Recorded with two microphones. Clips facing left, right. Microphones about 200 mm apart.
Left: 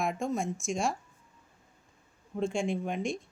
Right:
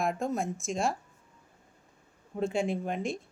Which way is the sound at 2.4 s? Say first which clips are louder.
Right 1 dB; 5° right (ahead or behind).